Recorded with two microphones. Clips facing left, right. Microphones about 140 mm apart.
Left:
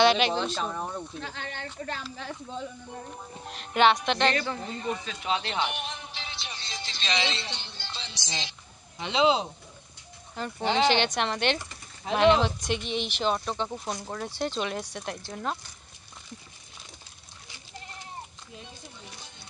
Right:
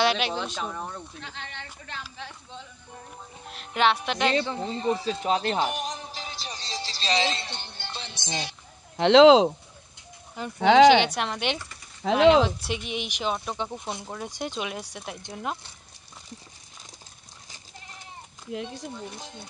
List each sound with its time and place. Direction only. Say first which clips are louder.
0.0 s speech: left 3 dB; 5° right (ahead or behind)
0.7 s speech: left 2 dB; 10° left (ahead or behind)
1.2 s a woman's voice: left 3 dB; 45° left (ahead or behind)
3.4 s speech: left 2 dB; centre (ahead or behind)
4.3 s speech: right 3 dB; 25° right (ahead or behind); by 8.4 s 55° right (ahead or behind)
8.9 s speech: right 10 dB; 85° right
10.3 s speech: right 9 dB; 10° right (ahead or behind)
12.0 s speech: right 3 dB; 75° right (ahead or behind)
12.4 s speech: left 1 dB; 5° right (ahead or behind)
18.5 s speech: right 12 dB; 90° right